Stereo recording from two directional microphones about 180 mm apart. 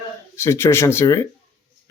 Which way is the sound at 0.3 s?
15° left (ahead or behind).